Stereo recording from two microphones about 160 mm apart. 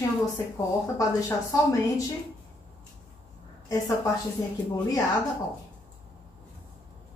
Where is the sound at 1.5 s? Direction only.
20° left (ahead or behind).